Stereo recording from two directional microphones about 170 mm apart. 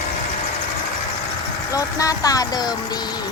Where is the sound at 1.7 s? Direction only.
20° left (ahead or behind).